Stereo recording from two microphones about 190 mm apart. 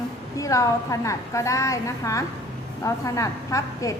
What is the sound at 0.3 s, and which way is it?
A woman's voice, 15° left (ahead or behind).